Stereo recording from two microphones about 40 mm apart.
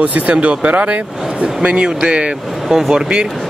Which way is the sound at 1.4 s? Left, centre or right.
Right.